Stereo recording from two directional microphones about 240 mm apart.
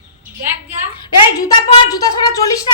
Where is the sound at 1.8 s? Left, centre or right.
Centre.